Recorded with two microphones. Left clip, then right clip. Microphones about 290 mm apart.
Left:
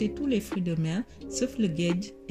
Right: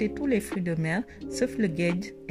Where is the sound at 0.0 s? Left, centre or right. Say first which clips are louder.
Right 2 dB; right.